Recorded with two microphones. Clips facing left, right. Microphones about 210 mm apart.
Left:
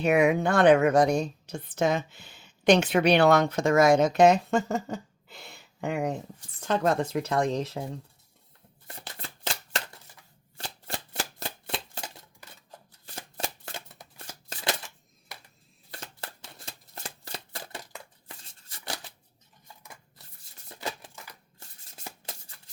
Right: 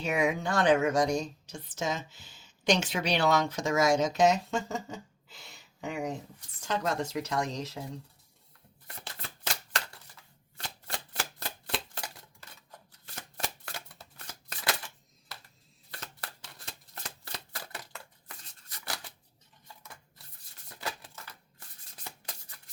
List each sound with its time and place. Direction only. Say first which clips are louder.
0.0 s a woman's voice: left 7 dB; 60° left (ahead or behind)
10.6 s shuffling cards: left 3 dB; 30° left (ahead or behind)
13.1 s shuffling cards: left 3 dB; 25° left (ahead or behind)
15.9 s shuffling cards: left 3 dB; 25° left (ahead or behind)
21.6 s a sound: left 4 dB; 25° left (ahead or behind)